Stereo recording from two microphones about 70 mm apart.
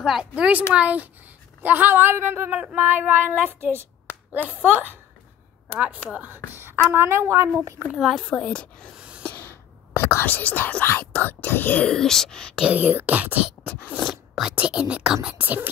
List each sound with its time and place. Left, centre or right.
0.0 s a woman's voice: centre
0.3 s speech: centre
6.0 s speech: centre
6.3 s speech: right
8.0 s a woman's voice: centre
8.3 s speech: centre
8.9 s a sound: centre
9.2 s whispering: left
10.2 s speech: left
11.8 s speech: centre
12.6 s speech: right
14.5 s speech: centre